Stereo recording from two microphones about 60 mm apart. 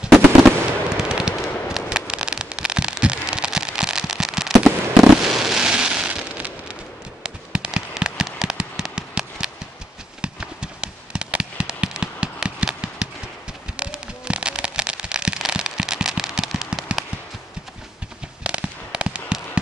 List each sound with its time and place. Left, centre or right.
0.0 s fireworks: centre
0.9 s a sound: centre
1.7 s fireworks: centre
18.4 s fireworks: centre